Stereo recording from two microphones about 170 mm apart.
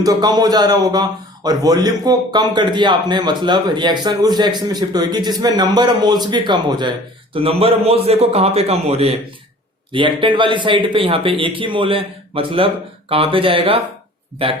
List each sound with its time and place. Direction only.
0.0 s a man's voice: 20° right (ahead or behind)